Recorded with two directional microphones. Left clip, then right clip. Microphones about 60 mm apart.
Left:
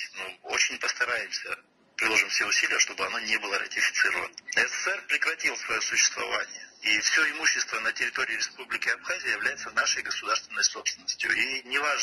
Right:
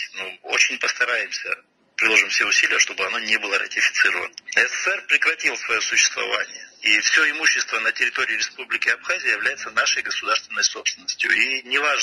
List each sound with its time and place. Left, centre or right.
0.5 s speech: right